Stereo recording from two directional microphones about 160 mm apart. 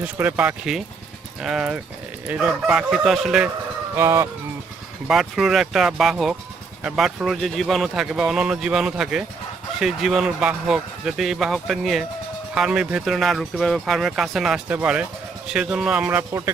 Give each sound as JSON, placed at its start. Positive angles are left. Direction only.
{"t": 0.0, "sound": "speech", "side_deg": -10}
{"t": 3.9, "sound": "speech", "side_deg": -15}
{"t": 5.0, "sound": "speech", "side_deg": 0}